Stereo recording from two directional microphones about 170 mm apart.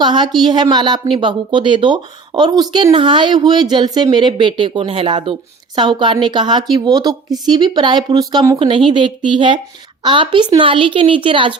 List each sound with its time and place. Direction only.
0.0 s speech: 25° right (ahead or behind)